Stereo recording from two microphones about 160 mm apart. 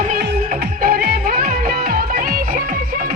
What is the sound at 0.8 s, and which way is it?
Music, 75° right (ahead or behind).